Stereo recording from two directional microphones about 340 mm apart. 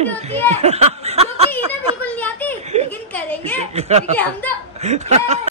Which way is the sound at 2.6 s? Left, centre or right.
Centre.